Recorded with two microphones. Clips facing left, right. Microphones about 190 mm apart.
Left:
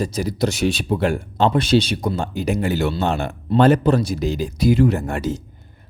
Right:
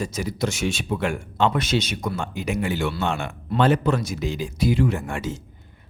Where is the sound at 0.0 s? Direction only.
35° left (ahead or behind).